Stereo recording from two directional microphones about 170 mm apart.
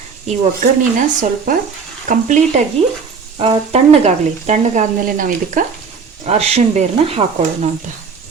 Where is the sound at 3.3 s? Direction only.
30° right (ahead or behind); by 5.6 s 50° right (ahead or behind).